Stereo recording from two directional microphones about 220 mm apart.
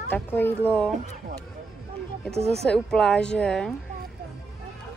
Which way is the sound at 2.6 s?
5° left (ahead or behind).